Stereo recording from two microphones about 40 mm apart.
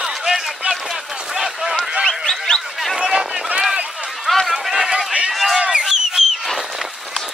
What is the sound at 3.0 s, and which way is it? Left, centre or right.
Run, centre.